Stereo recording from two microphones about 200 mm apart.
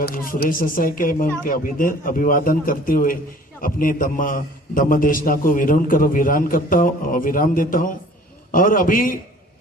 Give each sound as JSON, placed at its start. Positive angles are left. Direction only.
{"t": 0.0, "sound": "a man's voice", "side_deg": 45}